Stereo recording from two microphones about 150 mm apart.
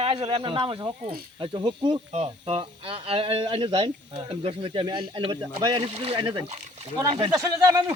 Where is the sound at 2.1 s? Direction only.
45° right (ahead or behind).